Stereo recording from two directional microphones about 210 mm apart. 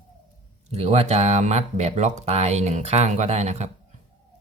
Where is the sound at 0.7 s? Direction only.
30° right (ahead or behind).